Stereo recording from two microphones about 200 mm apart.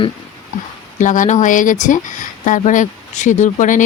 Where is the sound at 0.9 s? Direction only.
40° left (ahead or behind).